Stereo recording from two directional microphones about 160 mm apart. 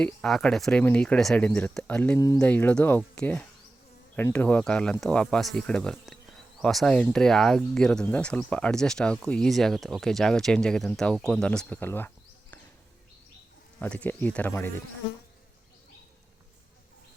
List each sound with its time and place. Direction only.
0.0 s speech: 5° left (ahead or behind)
2.1 s speech: 20° left (ahead or behind)
2.4 s speech: 10° left (ahead or behind)
13.7 s speech: 10° left (ahead or behind)